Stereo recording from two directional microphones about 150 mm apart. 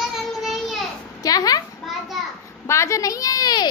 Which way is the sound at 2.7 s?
20° left (ahead or behind).